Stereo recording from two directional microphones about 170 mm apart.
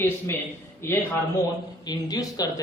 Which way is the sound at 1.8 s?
25° left (ahead or behind).